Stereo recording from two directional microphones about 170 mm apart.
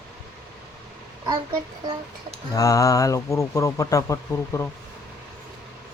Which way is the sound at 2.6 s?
20° left (ahead or behind).